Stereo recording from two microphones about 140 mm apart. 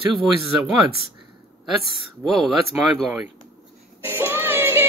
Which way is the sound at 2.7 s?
10° right (ahead or behind).